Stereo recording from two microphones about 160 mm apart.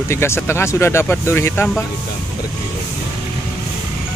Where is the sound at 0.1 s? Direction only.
15° left (ahead or behind).